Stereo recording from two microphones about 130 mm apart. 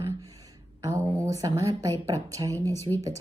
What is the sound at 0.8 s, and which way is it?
A woman's voice, 25° right (ahead or behind).